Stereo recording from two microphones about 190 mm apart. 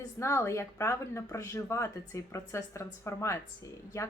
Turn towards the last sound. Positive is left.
turn(degrees=15)  # may be behind; listen again after turning